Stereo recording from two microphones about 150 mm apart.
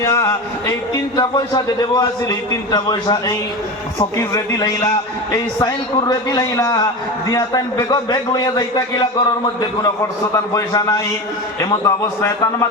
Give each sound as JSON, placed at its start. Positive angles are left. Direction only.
{"t": 0.0, "sound": "a man's voice", "side_deg": 20}